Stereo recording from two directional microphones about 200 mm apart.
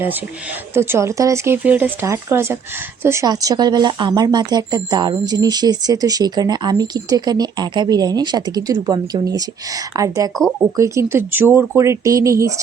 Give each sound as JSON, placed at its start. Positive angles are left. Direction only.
{"t": 0.7, "sound": "speech", "side_deg": -10}